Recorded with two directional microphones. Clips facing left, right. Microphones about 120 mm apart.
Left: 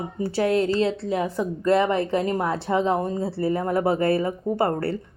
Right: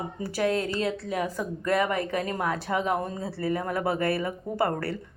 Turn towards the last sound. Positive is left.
turn(degrees=30)  # may be behind; listen again after turning